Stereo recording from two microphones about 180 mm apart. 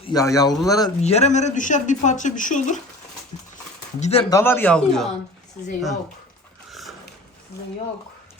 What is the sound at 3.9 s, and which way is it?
Speech, 40° left (ahead or behind).